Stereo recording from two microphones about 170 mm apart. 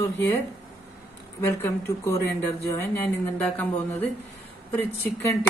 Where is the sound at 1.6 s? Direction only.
15° left (ahead or behind).